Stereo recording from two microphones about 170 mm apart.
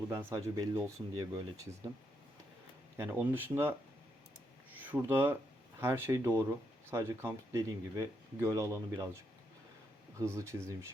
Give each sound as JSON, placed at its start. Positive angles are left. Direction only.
{"t": 0.1, "sound": "speech", "side_deg": -15}
{"t": 3.0, "sound": "speech", "side_deg": -15}
{"t": 4.9, "sound": "speech", "side_deg": -15}